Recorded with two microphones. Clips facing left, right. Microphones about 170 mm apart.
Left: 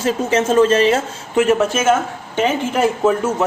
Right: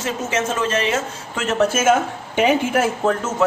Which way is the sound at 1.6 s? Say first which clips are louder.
Even; 5° right (ahead or behind).